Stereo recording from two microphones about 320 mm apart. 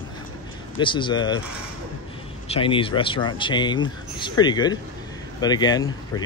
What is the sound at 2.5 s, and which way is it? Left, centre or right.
Speech, centre.